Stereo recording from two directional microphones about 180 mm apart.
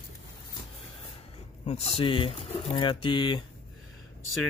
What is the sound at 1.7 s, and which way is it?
Speech, 35° left (ahead or behind).